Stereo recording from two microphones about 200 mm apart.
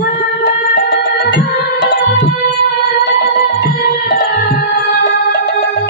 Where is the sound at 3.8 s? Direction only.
40° left (ahead or behind).